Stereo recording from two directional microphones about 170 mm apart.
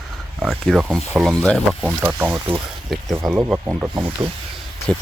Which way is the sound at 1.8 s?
10° right (ahead or behind).